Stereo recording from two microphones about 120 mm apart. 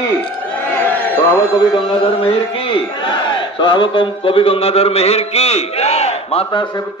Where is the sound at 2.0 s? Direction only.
50° left (ahead or behind).